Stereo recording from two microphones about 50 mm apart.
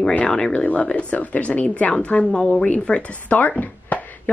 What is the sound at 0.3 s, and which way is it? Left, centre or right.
Speech, centre.